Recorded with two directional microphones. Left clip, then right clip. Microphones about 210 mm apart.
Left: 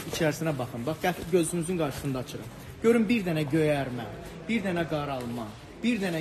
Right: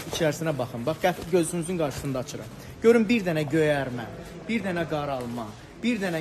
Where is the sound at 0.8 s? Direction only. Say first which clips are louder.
Right 4 dB; 15° right (ahead or behind).